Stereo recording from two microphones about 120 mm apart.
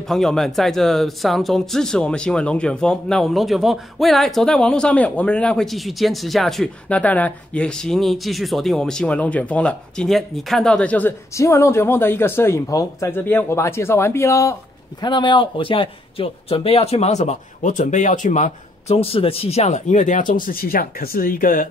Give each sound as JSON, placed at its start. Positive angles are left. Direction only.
{"t": 0.0, "sound": "speech", "side_deg": 5}
{"t": 11.3, "sound": "speech", "side_deg": 25}
{"t": 15.0, "sound": "speech", "side_deg": 40}
{"t": 18.9, "sound": "speech", "side_deg": 55}